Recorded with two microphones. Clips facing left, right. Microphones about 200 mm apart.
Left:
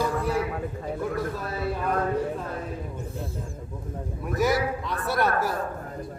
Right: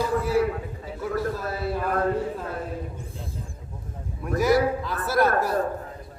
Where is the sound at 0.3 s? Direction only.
50° left (ahead or behind).